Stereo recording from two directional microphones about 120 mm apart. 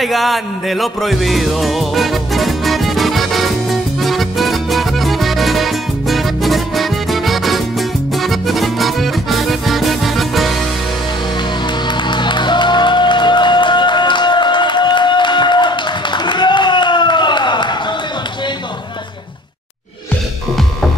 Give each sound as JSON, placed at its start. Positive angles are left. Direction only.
{"t": 0.0, "sound": "music", "side_deg": 0}
{"t": 12.1, "sound": "music", "side_deg": 40}